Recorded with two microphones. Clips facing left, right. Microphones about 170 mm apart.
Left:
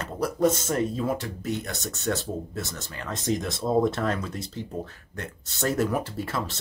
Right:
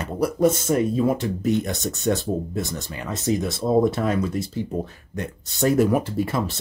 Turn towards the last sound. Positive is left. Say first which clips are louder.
# right 7 dB
turn(degrees=-15)  # may be behind; listen again after turning